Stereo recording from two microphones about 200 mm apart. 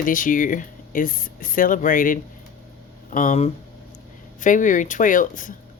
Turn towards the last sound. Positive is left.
turn(degrees=40)  # may be behind; listen again after turning